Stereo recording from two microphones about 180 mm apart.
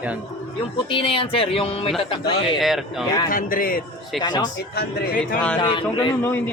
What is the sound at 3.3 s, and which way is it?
Speech, 50° left (ahead or behind).